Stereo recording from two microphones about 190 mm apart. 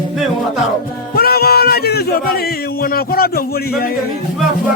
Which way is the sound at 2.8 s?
50° left (ahead or behind).